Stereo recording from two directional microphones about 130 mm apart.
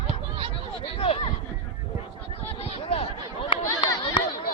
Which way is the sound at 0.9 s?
45° left (ahead or behind).